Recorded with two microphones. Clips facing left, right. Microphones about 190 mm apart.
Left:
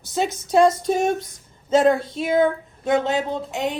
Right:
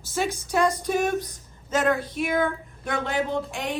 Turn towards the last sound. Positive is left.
turn(degrees=20)  # may be behind; listen again after turning